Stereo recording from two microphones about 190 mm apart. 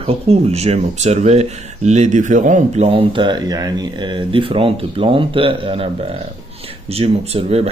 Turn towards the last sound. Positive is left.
turn(degrees=-35)  # may be behind; listen again after turning